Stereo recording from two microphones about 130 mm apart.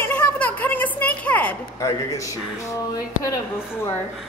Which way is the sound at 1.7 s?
25° left (ahead or behind).